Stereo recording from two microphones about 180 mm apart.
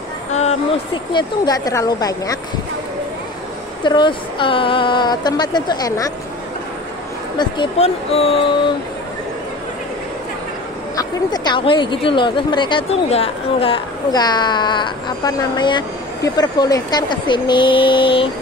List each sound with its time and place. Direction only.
0.3 s a sound: 40° left (ahead or behind)
1.1 s speech: 20° left (ahead or behind)
3.8 s speech: 25° left (ahead or behind)
7.3 s speech: 25° left (ahead or behind)
11.0 s speech: 25° left (ahead or behind)